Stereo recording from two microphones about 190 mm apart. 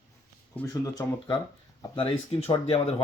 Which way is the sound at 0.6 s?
20° left (ahead or behind).